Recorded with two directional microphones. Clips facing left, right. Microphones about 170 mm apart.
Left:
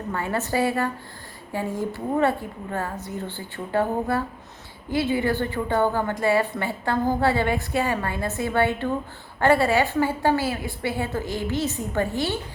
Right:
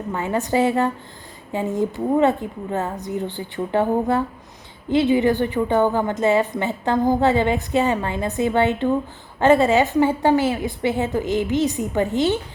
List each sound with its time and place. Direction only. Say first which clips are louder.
0.1 s a woman's voice: right 4 dB; 15° right (ahead or behind)